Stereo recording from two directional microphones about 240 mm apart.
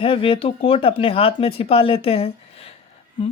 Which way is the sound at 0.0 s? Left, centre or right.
Left.